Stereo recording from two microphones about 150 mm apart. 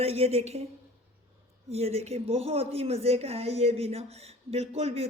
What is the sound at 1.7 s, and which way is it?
Speech, 45° right (ahead or behind).